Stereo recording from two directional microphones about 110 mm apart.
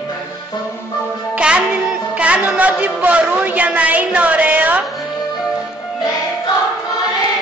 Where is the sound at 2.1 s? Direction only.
10° right (ahead or behind).